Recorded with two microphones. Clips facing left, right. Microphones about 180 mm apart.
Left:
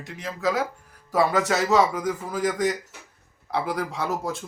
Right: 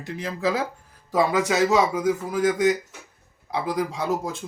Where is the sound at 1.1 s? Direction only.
15° right (ahead or behind).